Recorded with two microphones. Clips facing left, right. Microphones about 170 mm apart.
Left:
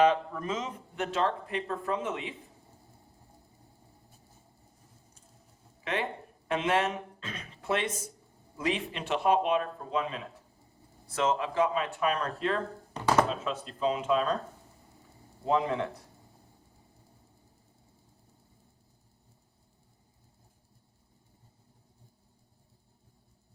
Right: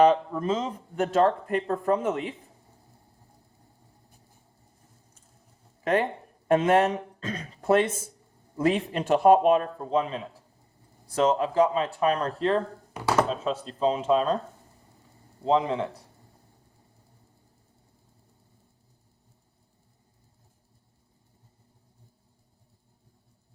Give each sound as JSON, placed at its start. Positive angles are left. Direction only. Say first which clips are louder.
{"t": 0.0, "sound": "speech", "louder": "right 5 dB", "side_deg": -30}
{"t": 5.8, "sound": "speech", "louder": "right 8 dB", "side_deg": -45}
{"t": 12.9, "sound": "speech", "louder": "even", "side_deg": -10}
{"t": 13.4, "sound": "speech", "louder": "right 5 dB", "side_deg": -35}
{"t": 15.4, "sound": "a man's voice", "louder": "right 4 dB", "side_deg": -20}